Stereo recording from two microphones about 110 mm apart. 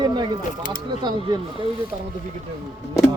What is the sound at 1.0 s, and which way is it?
Speech, 40° right (ahead or behind).